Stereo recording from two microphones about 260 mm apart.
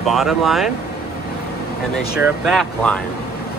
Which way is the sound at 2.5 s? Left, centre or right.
Centre.